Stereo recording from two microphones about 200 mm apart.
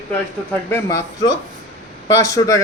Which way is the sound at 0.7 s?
15° left (ahead or behind).